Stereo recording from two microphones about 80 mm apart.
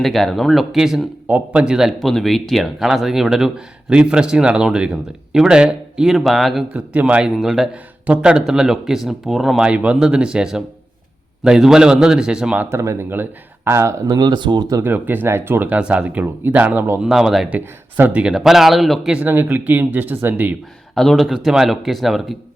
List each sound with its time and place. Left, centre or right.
0.0 s speech: centre
1.9 s speech: centre
6.7 s speech: centre
9.6 s speech: centre
12.7 s speech: right
14.1 s speech: right
14.8 s speech: right
17.0 s speech: centre
17.5 s speech: right
18.2 s speech: centre
19.1 s speech: right
20.9 s speech: centre